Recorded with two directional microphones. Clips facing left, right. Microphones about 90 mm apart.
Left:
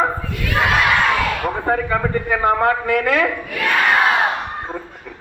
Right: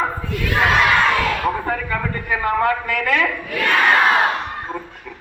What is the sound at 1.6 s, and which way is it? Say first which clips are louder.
A man's voice: left 4 dB; 30° left (ahead or behind).